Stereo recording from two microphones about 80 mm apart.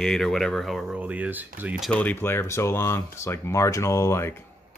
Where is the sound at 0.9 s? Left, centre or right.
Centre.